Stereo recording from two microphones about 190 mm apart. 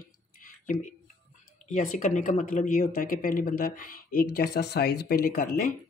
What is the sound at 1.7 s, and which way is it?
Speech, 40° left (ahead or behind).